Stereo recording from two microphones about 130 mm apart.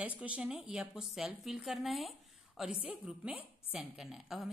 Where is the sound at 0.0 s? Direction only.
10° right (ahead or behind).